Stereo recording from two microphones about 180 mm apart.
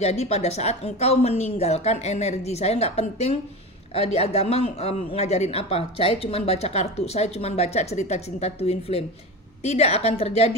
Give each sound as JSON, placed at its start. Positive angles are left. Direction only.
{"t": 0.0, "sound": "speech", "side_deg": 35}